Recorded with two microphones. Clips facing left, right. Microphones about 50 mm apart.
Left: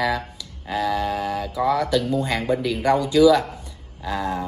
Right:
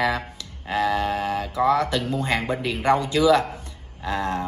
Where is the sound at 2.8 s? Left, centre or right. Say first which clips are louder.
Left 3 dB; right.